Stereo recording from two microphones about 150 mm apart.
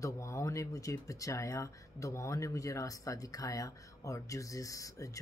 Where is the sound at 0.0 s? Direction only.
20° left (ahead or behind).